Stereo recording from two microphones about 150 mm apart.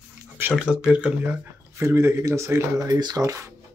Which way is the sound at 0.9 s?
10° right (ahead or behind).